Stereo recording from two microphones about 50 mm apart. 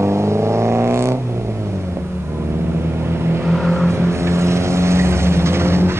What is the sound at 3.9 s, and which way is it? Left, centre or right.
Vehicle, right.